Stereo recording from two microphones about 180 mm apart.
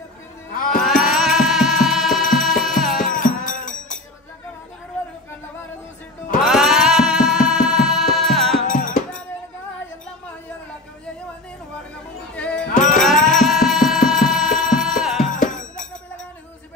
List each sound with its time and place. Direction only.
1.0 s music: 5° right (ahead or behind)
3.0 s music: 50° left (ahead or behind)
6.4 s music: centre (ahead or behind)
8.6 s music: 45° left (ahead or behind)
12.4 s music: 5° left (ahead or behind)
12.7 s music: 45° left (ahead or behind)
13.0 s music: centre (ahead or behind)
15.3 s music: 45° left (ahead or behind)